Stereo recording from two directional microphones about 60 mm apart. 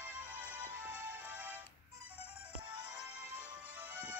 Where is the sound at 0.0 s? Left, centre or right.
Right.